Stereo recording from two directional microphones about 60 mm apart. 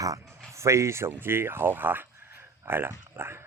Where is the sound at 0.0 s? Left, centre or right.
Right.